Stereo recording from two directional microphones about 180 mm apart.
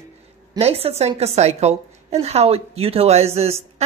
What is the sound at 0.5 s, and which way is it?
A woman's voice, 35° right (ahead or behind).